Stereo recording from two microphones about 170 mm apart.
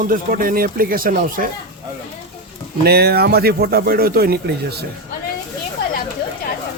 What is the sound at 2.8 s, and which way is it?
Speech, 70° right (ahead or behind).